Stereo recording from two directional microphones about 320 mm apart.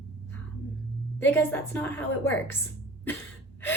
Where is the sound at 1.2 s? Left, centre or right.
Centre.